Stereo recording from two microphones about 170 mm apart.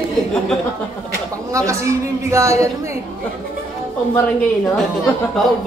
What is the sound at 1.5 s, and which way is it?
A woman's voice, 15° right (ahead or behind).